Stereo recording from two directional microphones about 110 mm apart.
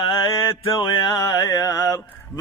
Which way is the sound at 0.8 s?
40° left (ahead or behind).